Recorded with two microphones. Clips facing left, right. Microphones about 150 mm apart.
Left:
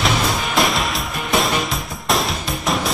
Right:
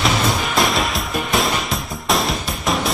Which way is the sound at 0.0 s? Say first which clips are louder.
Right 1 dB; centre (ahead or behind).